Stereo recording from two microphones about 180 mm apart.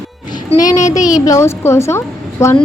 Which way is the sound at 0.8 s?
45° left (ahead or behind).